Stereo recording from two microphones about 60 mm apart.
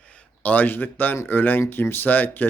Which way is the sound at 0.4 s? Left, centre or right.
Left.